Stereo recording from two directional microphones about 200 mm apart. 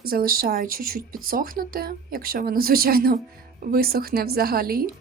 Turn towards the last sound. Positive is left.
turn(degrees=-50)  # may be behind; listen again after turning